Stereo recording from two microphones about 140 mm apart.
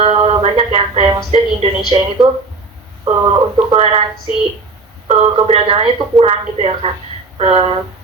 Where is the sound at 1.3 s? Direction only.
40° right (ahead or behind).